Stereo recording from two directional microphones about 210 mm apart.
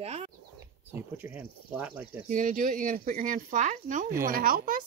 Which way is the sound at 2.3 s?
40° right (ahead or behind).